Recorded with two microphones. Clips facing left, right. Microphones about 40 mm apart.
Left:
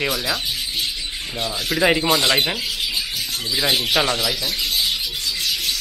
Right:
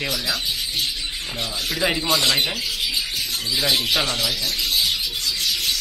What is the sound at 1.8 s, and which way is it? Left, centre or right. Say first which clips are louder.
Speech: left 4 dB; left.